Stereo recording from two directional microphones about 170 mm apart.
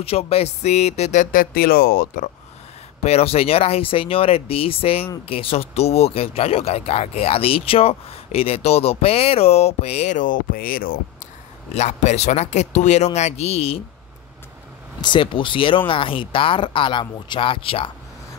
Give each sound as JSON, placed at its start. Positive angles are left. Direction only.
{"t": 0.0, "sound": "speech", "side_deg": 35}
{"t": 3.0, "sound": "speech", "side_deg": 40}
{"t": 11.7, "sound": "speech", "side_deg": 40}
{"t": 15.0, "sound": "speech", "side_deg": 30}